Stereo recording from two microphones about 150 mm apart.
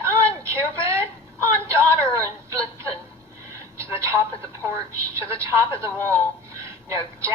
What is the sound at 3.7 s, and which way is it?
Telephone, 20° right (ahead or behind).